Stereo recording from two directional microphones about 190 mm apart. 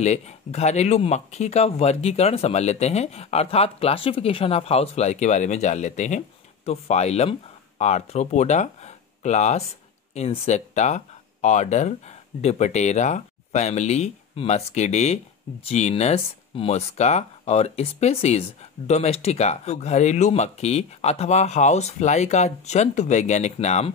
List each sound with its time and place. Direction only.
0.0 s speech: 35° left (ahead or behind)